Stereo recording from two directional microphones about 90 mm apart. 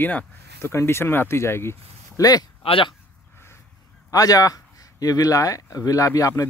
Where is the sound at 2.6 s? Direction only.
85° left.